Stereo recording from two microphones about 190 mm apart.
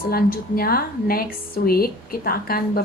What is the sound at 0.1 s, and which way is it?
A woman's voice, 50° left (ahead or behind).